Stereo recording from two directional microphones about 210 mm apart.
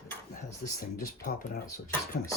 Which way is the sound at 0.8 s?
45° left (ahead or behind).